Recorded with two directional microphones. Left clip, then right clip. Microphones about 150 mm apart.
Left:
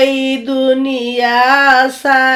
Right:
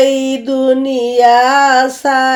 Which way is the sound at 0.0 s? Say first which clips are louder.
Right 1 dB; 40° right (ahead or behind).